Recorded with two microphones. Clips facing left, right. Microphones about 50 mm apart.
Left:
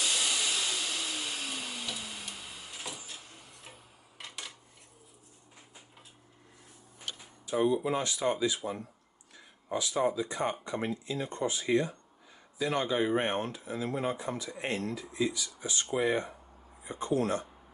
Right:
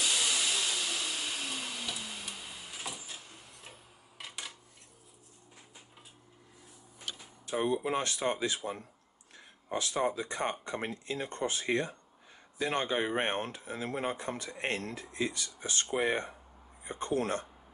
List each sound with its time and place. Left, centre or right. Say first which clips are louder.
0.0 s vacuum cleaner: even; centre
4.2 s a sound: even; centre
7.6 s speech: left 2 dB; right